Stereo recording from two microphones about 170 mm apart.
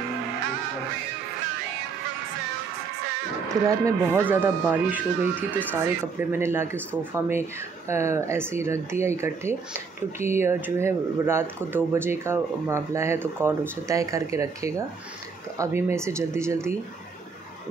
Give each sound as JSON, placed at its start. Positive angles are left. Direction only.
{"t": 3.6, "sound": "speech", "side_deg": -15}